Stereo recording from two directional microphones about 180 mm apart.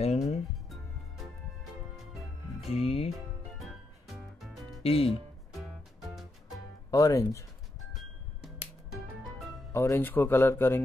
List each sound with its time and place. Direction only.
0.0 s music: 35° left (ahead or behind)
0.7 s music: centre (ahead or behind)
2.6 s music: 35° left (ahead or behind)
3.6 s music: centre (ahead or behind)
4.8 s speech: 30° left (ahead or behind)
6.9 s speech: 20° left (ahead or behind)
7.9 s music: centre (ahead or behind)
9.7 s speech: 15° left (ahead or behind)